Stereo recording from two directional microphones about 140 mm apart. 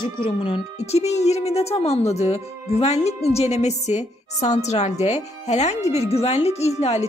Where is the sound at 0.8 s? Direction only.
50° left (ahead or behind).